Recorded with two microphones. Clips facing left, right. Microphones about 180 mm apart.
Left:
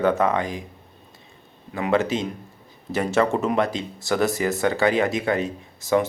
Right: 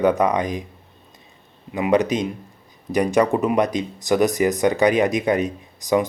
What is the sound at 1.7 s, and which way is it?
Speech, 15° right (ahead or behind).